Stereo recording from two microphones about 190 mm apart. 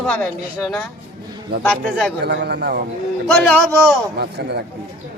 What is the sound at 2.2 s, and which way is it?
Speech, 60° right (ahead or behind).